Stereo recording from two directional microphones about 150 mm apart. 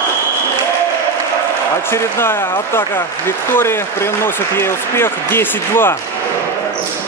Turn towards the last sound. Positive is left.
turn(degrees=15)  # may be behind; listen again after turning